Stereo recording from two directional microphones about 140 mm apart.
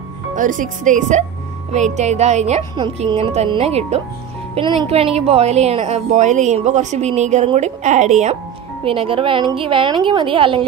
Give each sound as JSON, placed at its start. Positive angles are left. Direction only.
{"t": 0.4, "sound": "a woman's voice", "side_deg": -70}
{"t": 8.8, "sound": "a woman's voice", "side_deg": -40}